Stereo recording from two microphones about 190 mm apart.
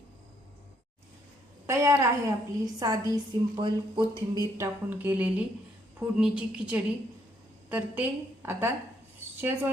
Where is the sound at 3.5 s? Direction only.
25° right (ahead or behind).